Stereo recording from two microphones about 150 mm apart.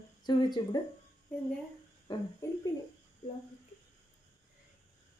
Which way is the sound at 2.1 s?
30° left (ahead or behind).